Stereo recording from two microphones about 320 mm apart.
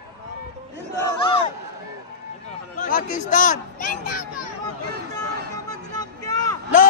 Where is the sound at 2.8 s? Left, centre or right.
Left.